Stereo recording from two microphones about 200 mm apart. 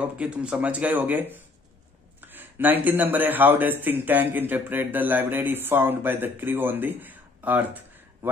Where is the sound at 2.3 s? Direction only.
10° right (ahead or behind).